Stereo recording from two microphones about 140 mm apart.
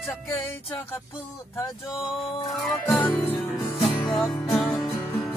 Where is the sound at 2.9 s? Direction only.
10° left (ahead or behind).